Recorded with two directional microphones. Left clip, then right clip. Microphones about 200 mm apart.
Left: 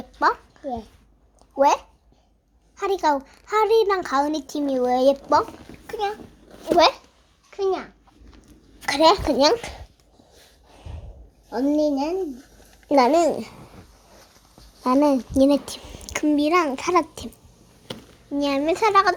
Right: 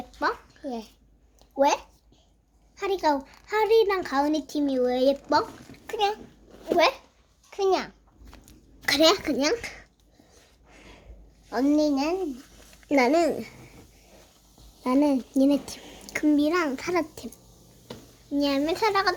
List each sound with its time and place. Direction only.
0.2 s a child's voice: 20° left (ahead or behind)
0.6 s a child's voice: centre (ahead or behind)
1.5 s a child's voice: 10° left (ahead or behind)
5.8 s bathtub: 15° right (ahead or behind)
6.7 s a child's voice: 15° left (ahead or behind)
7.5 s a child's voice: 50° right (ahead or behind)
8.9 s a child's voice: 5° right (ahead or behind)
9.3 s a child's voice: 5° left (ahead or behind)
11.8 s a child's voice: 15° left (ahead or behind)
12.9 s a child's voice: 5° left (ahead or behind)
14.8 s a child's voice: 15° left (ahead or behind)
18.3 s a child's voice: 10° left (ahead or behind)